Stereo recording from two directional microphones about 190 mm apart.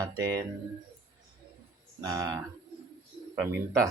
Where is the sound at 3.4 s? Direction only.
15° right (ahead or behind).